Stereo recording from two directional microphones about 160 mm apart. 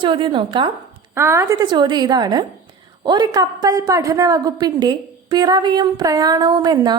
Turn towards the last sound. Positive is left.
turn(degrees=-25)  # may be behind; listen again after turning